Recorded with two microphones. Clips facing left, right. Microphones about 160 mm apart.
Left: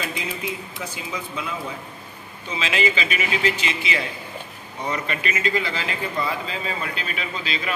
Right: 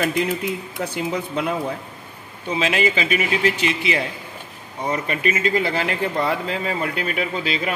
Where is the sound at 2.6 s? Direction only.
50° right (ahead or behind).